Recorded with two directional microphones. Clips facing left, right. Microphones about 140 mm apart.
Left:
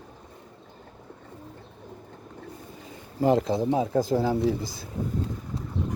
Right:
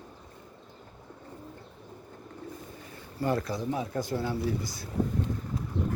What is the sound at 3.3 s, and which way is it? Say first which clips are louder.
Speech: left 7 dB; 20° left (ahead or behind).